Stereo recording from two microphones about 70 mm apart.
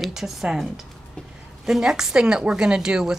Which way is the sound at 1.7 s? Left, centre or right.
Centre.